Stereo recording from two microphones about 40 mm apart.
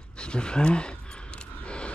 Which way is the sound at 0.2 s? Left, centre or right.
Left.